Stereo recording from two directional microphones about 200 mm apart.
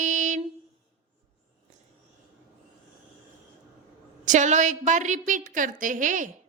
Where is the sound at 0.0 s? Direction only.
40° right (ahead or behind).